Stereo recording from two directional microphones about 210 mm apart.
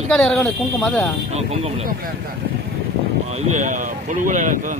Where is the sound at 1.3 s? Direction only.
30° right (ahead or behind).